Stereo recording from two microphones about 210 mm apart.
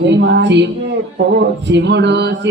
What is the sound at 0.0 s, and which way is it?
Mantra, 55° right (ahead or behind).